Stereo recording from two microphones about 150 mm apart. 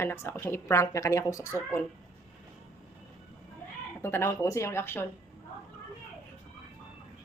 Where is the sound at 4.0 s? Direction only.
15° left (ahead or behind).